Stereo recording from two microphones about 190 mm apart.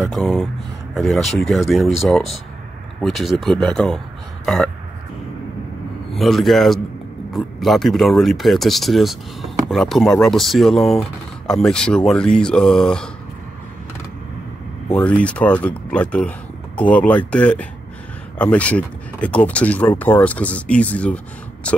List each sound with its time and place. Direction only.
0.1 s speech: centre (ahead or behind)
6.1 s speech: centre (ahead or behind)
15.0 s speech: 5° left (ahead or behind)